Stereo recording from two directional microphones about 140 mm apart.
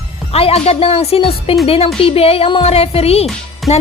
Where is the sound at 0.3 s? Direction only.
45° left (ahead or behind).